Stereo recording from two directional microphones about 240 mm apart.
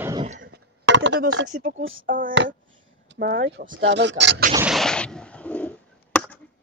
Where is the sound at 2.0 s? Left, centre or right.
Right.